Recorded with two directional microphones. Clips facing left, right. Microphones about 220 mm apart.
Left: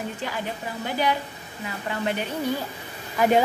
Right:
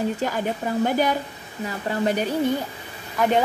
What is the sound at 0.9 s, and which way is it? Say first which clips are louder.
A woman's voice: right 3 dB; 45° right (ahead or behind).